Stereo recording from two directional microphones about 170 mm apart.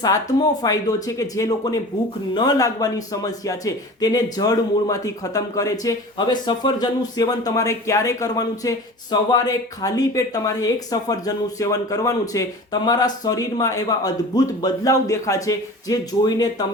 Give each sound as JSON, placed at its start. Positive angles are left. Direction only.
{"t": 0.0, "sound": "speech", "side_deg": 20}